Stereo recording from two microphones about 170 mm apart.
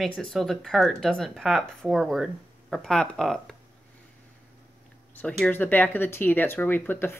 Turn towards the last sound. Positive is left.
turn(degrees=10)  # may be behind; listen again after turning